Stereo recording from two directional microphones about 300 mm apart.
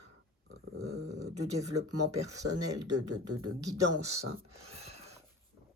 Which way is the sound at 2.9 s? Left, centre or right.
Right.